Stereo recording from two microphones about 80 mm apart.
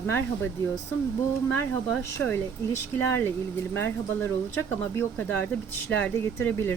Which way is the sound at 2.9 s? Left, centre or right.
Left.